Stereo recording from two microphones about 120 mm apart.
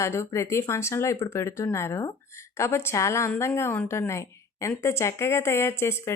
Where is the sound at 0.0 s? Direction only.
25° left (ahead or behind).